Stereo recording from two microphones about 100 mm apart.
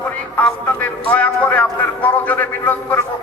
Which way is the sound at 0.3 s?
10° left (ahead or behind).